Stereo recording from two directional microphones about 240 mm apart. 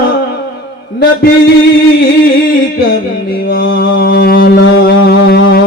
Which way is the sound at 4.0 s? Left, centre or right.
Left.